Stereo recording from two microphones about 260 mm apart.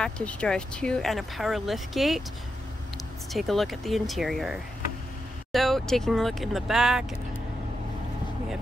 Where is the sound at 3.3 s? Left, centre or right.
Centre.